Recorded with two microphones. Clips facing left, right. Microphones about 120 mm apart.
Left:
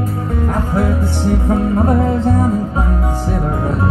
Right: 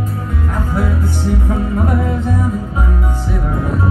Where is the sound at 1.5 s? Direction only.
30° left (ahead or behind).